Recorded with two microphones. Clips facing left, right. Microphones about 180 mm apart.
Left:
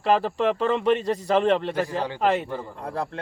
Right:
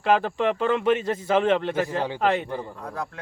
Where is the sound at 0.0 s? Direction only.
Centre (ahead or behind).